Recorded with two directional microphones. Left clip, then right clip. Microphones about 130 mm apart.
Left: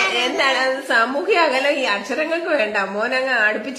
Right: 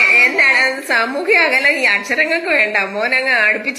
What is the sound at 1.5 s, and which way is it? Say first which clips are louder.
A woman's voice: right 5 dB; 35° right (ahead or behind).